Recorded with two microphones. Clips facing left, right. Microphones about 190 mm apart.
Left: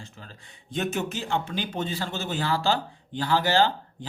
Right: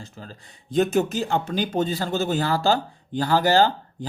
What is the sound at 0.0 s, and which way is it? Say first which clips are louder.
Speech: right 5 dB; 35° right (ahead or behind).